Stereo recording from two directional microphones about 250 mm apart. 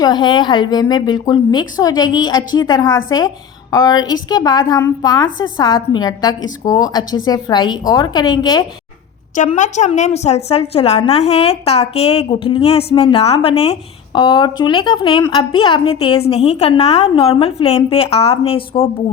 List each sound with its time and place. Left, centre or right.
0.0 s a woman's voice: centre
9.3 s a woman's voice: left